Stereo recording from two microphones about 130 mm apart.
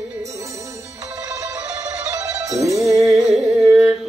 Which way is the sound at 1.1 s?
25° right (ahead or behind).